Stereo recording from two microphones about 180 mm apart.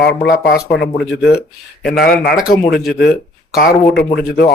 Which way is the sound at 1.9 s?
55° left (ahead or behind).